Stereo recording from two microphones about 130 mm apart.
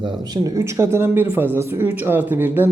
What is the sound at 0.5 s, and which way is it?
Speech, 20° right (ahead or behind).